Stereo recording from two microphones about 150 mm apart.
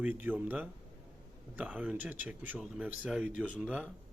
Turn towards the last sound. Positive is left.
turn(degrees=-10)  # may be behind; listen again after turning